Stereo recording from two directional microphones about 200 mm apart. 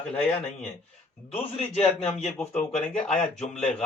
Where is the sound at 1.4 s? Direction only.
30° left (ahead or behind).